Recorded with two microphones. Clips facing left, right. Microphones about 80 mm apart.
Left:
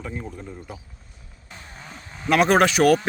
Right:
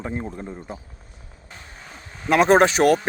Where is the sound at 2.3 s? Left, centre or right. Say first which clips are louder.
Right 2 dB; right.